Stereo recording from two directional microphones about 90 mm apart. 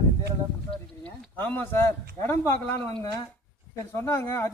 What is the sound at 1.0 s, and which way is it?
A man's voice, 20° left (ahead or behind).